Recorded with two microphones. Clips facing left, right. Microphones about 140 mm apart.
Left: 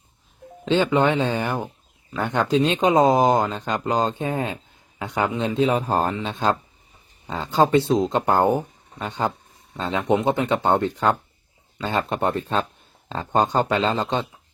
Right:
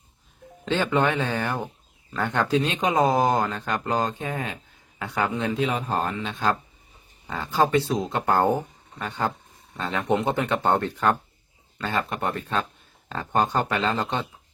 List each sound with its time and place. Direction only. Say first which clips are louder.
0.6 s a man's voice: left 4 dB; 20° left (ahead or behind)
5.4 s speech: left 5 dB; 30° left (ahead or behind)